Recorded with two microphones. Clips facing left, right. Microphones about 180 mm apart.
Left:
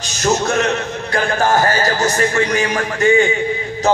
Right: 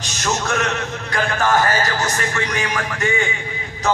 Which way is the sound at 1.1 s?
35° left (ahead or behind).